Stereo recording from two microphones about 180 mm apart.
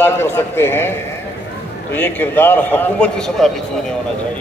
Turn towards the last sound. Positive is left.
turn(degrees=0)  # may be behind; listen again after turning